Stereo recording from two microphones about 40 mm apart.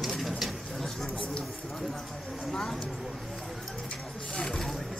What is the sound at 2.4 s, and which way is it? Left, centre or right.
Vehicle, centre.